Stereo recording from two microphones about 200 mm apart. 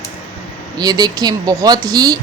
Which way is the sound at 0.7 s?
20° right (ahead or behind).